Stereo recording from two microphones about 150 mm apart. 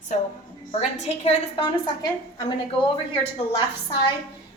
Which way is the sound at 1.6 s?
25° left (ahead or behind).